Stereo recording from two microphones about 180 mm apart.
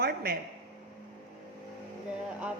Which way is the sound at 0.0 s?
60° right (ahead or behind).